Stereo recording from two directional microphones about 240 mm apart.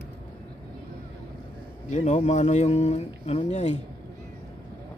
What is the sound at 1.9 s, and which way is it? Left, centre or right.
Speech, left.